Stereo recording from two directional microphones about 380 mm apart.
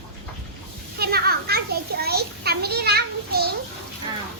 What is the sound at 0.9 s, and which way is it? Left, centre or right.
A child's voice, right.